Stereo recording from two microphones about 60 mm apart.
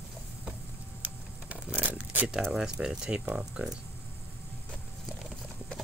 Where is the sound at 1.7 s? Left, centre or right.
Right.